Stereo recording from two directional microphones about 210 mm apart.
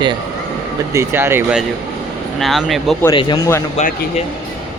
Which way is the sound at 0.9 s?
10° right (ahead or behind).